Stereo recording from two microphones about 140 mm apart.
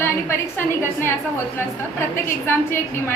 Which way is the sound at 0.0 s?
15° left (ahead or behind).